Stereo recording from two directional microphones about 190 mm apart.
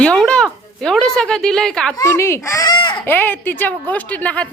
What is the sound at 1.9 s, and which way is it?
Speech, 15° left (ahead or behind).